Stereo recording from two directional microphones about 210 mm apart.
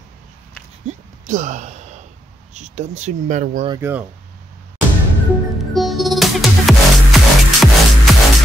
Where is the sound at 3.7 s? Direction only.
10° right (ahead or behind).